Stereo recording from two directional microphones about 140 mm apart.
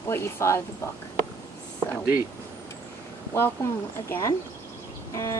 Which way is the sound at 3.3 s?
15° left (ahead or behind).